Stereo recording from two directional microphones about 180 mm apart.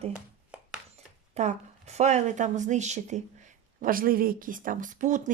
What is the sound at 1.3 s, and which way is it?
A woman's voice, 40° right (ahead or behind).